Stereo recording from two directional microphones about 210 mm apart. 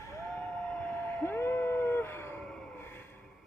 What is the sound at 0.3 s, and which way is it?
Vehicle, 5° left (ahead or behind).